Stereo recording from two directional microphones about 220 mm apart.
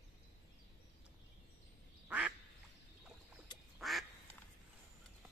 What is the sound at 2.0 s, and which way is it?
Quack, 5° right (ahead or behind).